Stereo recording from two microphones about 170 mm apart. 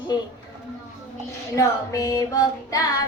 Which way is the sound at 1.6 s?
20° left (ahead or behind).